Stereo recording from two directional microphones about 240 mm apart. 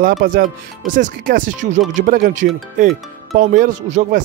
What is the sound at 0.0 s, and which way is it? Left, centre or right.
Speech, right.